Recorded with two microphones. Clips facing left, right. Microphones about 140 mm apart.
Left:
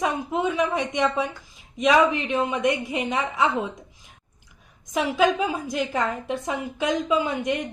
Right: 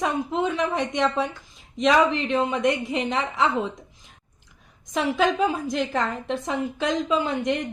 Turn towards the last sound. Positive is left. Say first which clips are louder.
# even
turn(degrees=10)  # may be behind; listen again after turning